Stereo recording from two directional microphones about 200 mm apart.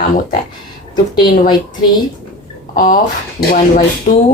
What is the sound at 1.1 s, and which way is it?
Speech, 20° left (ahead or behind).